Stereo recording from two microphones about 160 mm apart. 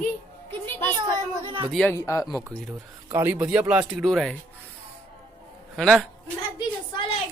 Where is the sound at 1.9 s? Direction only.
20° left (ahead or behind).